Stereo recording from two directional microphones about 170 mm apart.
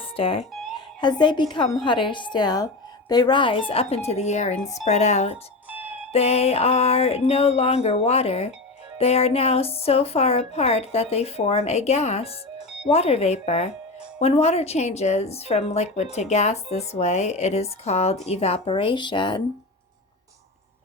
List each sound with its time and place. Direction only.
0.0 s music: 30° left (ahead or behind)
1.0 s a woman's voice: 25° left (ahead or behind)